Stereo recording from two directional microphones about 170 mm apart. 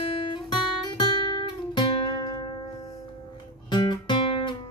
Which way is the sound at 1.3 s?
25° left (ahead or behind).